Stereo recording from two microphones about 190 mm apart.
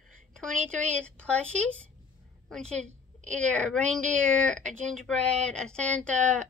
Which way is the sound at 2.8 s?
40° right (ahead or behind).